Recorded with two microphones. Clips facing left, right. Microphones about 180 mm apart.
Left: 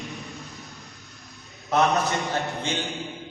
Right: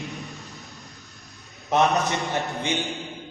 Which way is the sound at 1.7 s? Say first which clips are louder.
Right 1 dB; 20° right (ahead or behind).